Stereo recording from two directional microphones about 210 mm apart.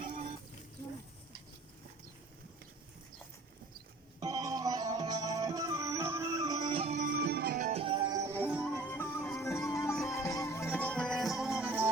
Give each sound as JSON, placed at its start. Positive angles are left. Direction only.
{"t": 4.2, "sound": "music", "side_deg": -15}
{"t": 7.7, "sound": "music", "side_deg": -25}
{"t": 8.7, "sound": "music", "side_deg": 10}